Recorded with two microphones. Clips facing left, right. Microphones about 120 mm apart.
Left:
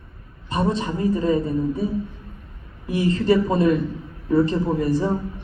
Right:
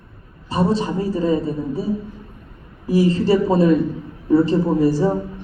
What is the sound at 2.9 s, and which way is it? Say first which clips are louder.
Speech: right 3 dB; 30° right (ahead or behind).